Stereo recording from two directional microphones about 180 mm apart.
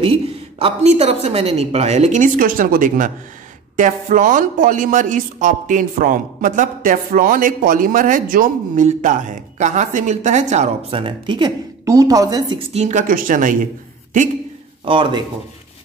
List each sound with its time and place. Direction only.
0.0 s a woman's voice: 30° right (ahead or behind)
12.7 s a man's voice: 40° right (ahead or behind)
14.9 s speech: 25° right (ahead or behind)